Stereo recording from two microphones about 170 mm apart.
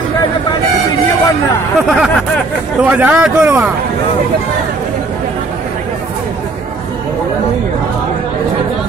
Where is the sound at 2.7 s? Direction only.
5° right (ahead or behind).